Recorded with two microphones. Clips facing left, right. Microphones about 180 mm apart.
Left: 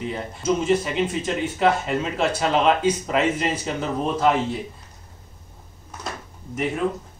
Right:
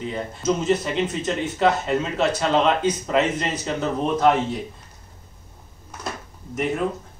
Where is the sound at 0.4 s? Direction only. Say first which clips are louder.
Left 1 dB; 10° left (ahead or behind).